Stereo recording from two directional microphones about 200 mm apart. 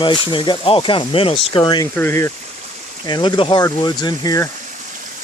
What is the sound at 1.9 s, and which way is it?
Speech, 10° left (ahead or behind).